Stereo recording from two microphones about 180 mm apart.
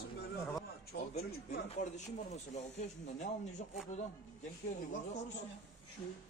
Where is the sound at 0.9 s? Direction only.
60° left (ahead or behind).